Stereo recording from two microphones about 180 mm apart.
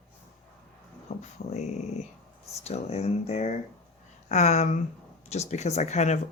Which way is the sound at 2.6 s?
35° left (ahead or behind).